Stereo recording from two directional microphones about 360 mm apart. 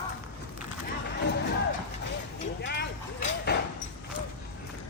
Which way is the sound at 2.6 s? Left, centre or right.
Left.